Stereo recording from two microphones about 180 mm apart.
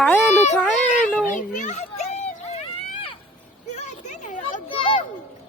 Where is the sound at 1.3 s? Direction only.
45° left (ahead or behind).